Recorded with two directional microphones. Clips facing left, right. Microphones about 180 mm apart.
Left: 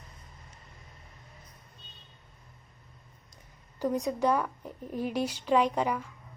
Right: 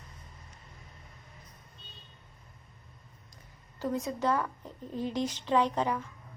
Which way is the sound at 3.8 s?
15° left (ahead or behind).